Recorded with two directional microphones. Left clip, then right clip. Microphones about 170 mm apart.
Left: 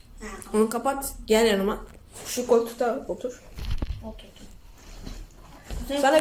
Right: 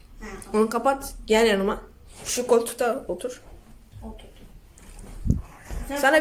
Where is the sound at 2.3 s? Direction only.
5° right (ahead or behind).